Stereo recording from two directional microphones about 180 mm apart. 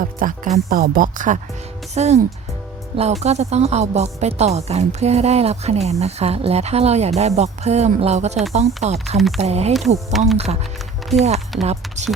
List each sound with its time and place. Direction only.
0.0 s speech: 50° right (ahead or behind)
9.1 s speech: centre (ahead or behind)
9.4 s speech: 35° right (ahead or behind)
10.1 s speech: centre (ahead or behind)
10.3 s speech: 35° right (ahead or behind)
11.6 s speech: 35° right (ahead or behind)